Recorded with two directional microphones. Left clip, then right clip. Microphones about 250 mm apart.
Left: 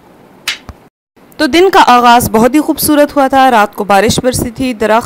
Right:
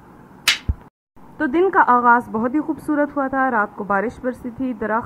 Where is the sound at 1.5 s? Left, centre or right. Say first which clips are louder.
Left 9 dB; left.